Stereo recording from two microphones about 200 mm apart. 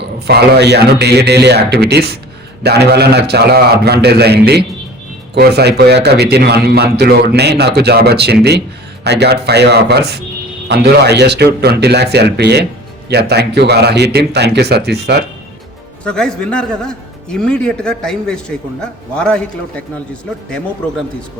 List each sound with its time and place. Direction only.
0.3 s a man's voice: 55° right (ahead or behind)
16.0 s a man's voice: 5° left (ahead or behind)